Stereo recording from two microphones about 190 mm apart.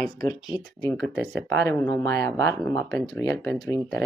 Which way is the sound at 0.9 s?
Centre (ahead or behind).